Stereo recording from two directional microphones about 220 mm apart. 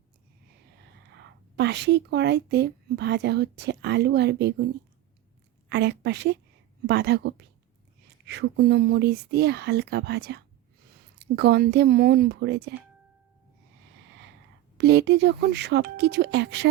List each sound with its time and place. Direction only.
1.1 s a woman's voice: 50° right (ahead or behind)
14.8 s speech: 50° right (ahead or behind)